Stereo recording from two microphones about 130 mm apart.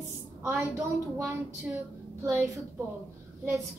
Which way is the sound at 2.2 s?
20° right (ahead or behind).